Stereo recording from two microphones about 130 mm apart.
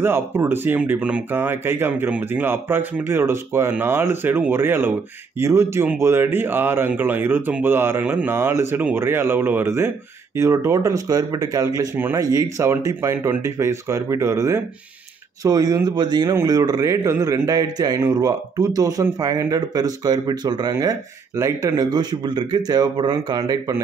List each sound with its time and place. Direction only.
0.0 s a man's voice: 15° right (ahead or behind)